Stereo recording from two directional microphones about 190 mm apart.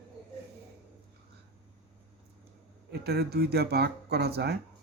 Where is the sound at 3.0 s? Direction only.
55° right (ahead or behind).